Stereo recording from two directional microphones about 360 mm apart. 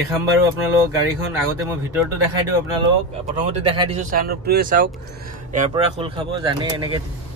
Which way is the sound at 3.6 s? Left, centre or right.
Centre.